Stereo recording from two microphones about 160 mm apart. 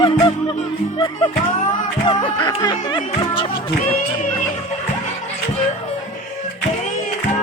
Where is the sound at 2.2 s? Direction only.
30° left (ahead or behind).